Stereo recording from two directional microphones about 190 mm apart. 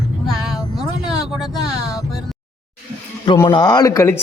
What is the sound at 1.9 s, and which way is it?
Music, 20° left (ahead or behind).